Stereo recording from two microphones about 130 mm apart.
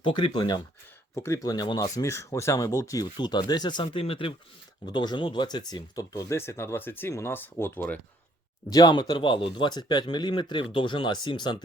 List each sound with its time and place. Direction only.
0.0 s speech: 35° left (ahead or behind)
1.1 s speech: 25° left (ahead or behind)
4.0 s speech: 45° left (ahead or behind)
4.9 s speech: 35° left (ahead or behind); by 7.9 s 15° left (ahead or behind)
8.7 s speech: 35° left (ahead or behind)